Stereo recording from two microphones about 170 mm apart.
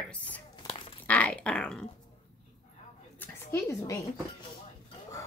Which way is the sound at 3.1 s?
15° left (ahead or behind).